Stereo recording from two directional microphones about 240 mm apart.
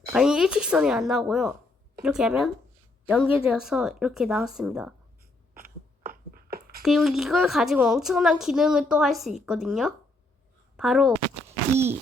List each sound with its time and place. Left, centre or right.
0.1 s a woman's voice: centre
5.5 s a sound: right
6.8 s a woman's voice: centre